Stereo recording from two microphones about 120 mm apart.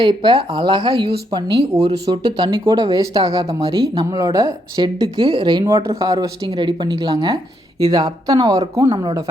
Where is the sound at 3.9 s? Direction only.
30° right (ahead or behind).